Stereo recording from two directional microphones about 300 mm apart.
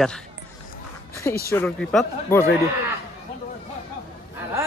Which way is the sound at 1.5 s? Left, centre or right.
Centre.